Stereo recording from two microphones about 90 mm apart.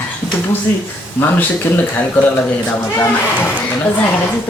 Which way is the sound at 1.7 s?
25° left (ahead or behind).